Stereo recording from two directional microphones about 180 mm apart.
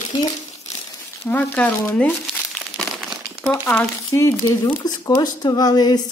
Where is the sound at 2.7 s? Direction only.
Centre (ahead or behind).